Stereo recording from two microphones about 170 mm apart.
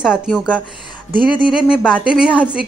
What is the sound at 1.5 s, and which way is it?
Speech, 5° right (ahead or behind).